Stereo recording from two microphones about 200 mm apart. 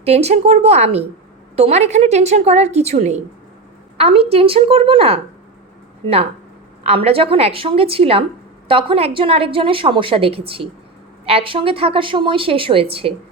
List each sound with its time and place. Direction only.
0.0 s a woman's voice: 30° right (ahead or behind)
6.8 s a woman's voice: 30° right (ahead or behind)